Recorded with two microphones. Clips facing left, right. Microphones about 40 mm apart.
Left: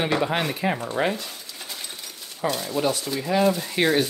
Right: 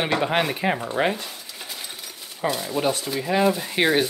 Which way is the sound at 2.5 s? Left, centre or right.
Centre.